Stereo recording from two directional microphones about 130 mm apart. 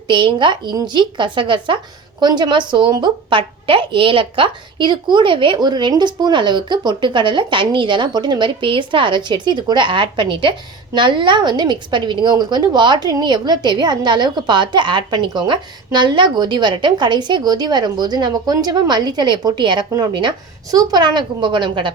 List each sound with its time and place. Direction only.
0.1 s a woman's voice: 40° right (ahead or behind)